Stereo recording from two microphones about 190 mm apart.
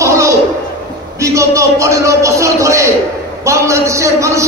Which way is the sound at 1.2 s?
15° right (ahead or behind).